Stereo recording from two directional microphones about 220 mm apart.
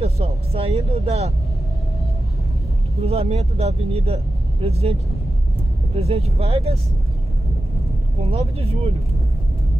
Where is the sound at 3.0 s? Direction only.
30° right (ahead or behind).